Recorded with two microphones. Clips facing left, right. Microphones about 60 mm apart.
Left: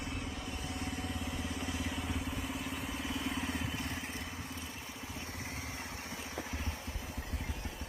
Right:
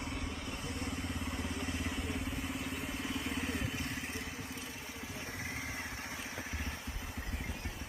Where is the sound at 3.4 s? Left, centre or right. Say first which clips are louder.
Even; right.